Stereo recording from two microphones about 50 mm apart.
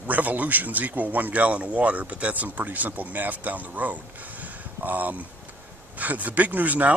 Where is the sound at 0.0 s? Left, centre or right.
Right.